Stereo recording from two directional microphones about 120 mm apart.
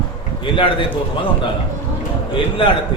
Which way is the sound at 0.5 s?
45° left (ahead or behind).